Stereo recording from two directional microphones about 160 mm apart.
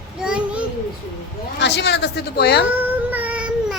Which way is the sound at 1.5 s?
90° left.